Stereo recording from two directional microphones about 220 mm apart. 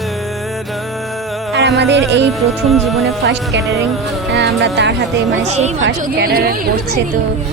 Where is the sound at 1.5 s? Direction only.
50° right (ahead or behind).